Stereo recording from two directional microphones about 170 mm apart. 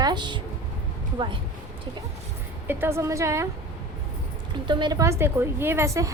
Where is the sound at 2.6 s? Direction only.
15° right (ahead or behind).